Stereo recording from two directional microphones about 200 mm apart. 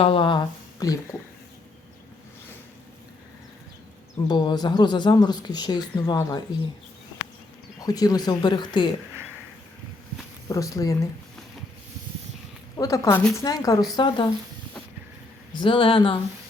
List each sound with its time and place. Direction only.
0.0 s speech: 25° left (ahead or behind)
4.3 s speech: 20° left (ahead or behind)
7.9 s speech: 20° left (ahead or behind)
10.5 s a woman's voice: 15° left (ahead or behind)
12.7 s a woman's voice: 15° left (ahead or behind)
15.5 s speech: 25° left (ahead or behind)